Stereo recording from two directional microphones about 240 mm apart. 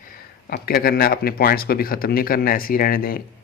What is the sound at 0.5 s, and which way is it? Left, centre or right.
Speech, left.